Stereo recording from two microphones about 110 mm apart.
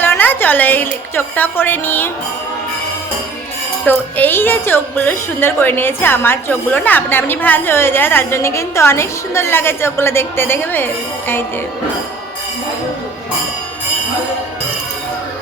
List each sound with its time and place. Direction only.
0.0 s a sound: 20° left (ahead or behind)
1.1 s a woman's voice: 20° left (ahead or behind)
3.8 s a woman's voice: 20° left (ahead or behind)